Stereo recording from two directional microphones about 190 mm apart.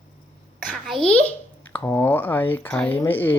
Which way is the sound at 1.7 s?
10° left (ahead or behind).